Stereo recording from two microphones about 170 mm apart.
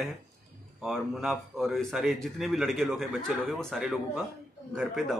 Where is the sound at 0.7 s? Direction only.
Centre (ahead or behind).